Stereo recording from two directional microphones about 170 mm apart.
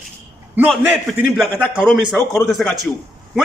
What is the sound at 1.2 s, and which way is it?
A man's voice, 5° left (ahead or behind).